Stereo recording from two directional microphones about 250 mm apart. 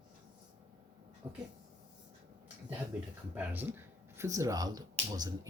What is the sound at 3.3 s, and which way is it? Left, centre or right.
Speech, centre.